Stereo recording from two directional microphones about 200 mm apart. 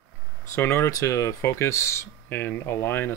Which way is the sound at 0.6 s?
15° left (ahead or behind).